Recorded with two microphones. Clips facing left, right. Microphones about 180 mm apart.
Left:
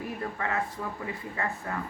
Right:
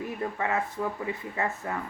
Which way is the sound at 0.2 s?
20° right (ahead or behind).